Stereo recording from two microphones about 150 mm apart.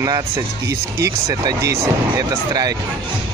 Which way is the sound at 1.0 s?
20° right (ahead or behind).